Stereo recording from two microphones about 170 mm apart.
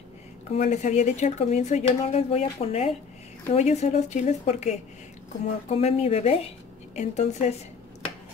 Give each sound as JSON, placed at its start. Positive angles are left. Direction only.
{"t": 0.5, "sound": "a woman's voice", "side_deg": 40}